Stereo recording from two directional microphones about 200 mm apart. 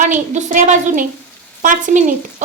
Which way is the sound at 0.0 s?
40° right (ahead or behind).